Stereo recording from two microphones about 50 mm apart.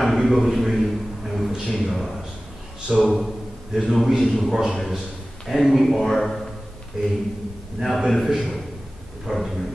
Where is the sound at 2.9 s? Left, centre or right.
Centre.